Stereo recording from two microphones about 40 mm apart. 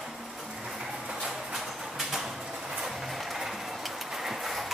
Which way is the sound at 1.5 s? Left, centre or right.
Centre.